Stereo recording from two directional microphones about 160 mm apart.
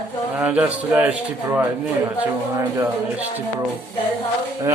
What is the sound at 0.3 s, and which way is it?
A man's voice, 10° right (ahead or behind).